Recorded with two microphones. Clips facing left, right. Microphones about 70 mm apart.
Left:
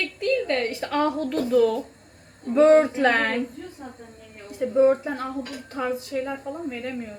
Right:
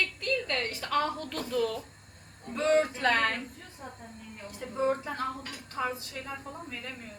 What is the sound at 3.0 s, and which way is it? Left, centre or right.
Speech, left.